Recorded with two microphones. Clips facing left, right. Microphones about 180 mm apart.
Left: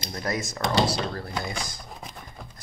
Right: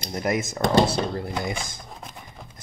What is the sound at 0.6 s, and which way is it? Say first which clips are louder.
Speech: right 4 dB; 50° right (ahead or behind).